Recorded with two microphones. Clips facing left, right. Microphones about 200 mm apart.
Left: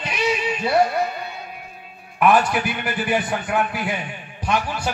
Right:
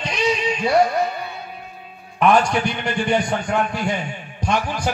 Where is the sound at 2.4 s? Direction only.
5° left (ahead or behind).